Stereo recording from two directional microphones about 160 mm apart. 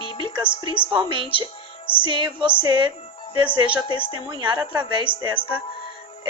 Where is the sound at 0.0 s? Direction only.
35° left (ahead or behind).